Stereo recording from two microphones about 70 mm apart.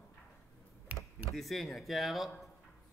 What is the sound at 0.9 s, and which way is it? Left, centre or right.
Computer keyboard, right.